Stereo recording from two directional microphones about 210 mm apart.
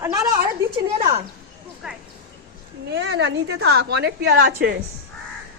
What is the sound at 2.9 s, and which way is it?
A woman's voice, 55° right (ahead or behind).